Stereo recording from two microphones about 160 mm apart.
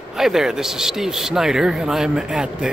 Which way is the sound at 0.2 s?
Centre (ahead or behind).